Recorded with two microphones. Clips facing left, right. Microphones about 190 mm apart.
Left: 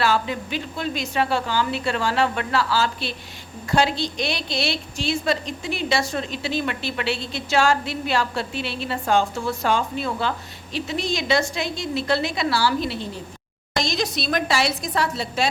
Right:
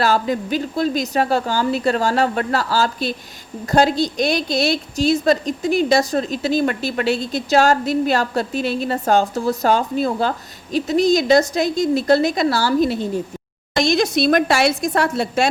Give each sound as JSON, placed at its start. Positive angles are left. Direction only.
{"t": 0.0, "sound": "a woman's voice", "side_deg": -40}